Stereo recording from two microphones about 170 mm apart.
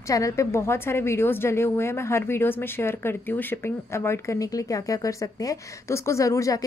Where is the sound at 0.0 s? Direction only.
20° left (ahead or behind).